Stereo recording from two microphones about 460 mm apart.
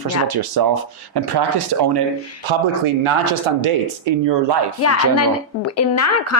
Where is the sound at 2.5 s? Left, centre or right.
Right.